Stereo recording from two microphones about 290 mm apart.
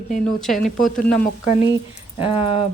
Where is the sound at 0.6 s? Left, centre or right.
Left.